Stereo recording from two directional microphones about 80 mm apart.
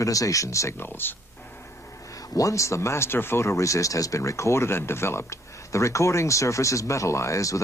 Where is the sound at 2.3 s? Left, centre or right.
Left.